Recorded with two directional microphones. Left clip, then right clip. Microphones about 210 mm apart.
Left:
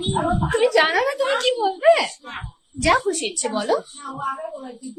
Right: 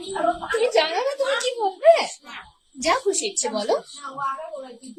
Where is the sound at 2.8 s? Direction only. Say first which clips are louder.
Left 3 dB; 15° right (ahead or behind).